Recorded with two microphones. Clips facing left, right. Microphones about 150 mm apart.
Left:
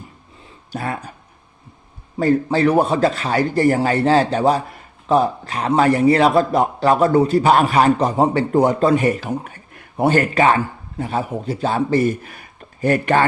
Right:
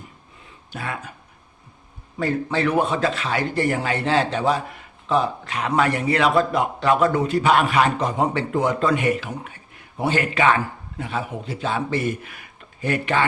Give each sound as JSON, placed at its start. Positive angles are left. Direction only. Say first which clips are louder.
{"t": 0.7, "sound": "a man's voice", "louder": "left 5 dB", "side_deg": 40}
{"t": 2.1, "sound": "a man's voice", "louder": "left 6 dB", "side_deg": 40}